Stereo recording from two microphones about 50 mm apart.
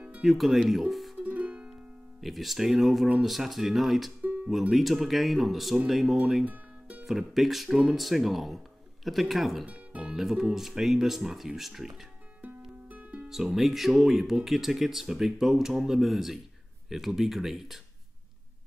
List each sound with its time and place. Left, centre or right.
0.2 s speech: centre
1.1 s music: right
2.2 s speech: centre
6.4 s music: right
7.1 s speech: centre
12.8 s music: right
13.3 s speech: centre